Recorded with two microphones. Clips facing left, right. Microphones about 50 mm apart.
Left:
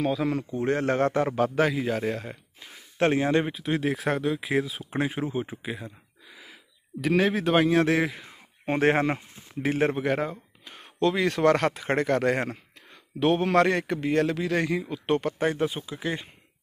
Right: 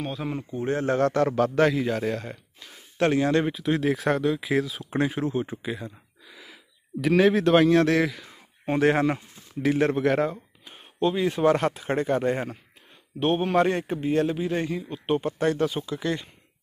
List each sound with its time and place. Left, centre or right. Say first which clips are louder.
0.2 s speech: left 4 dB; left
0.6 s a man's voice: right 1 dB; left
1.0 s a man's voice: right 2 dB; centre
2.6 s a sound: even; left
3.4 s speech: right 3 dB; centre; by 10.0 s left
10.0 s speech: right 4 dB; centre
10.6 s speech: even; left
13.7 s a man's voice: even; left
14.0 s speech: right 1 dB; left
15.5 s a man's voice: right 2 dB; centre